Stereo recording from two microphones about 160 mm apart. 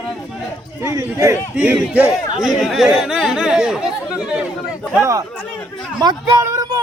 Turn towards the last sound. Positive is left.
turn(degrees=-20)  # may be behind; listen again after turning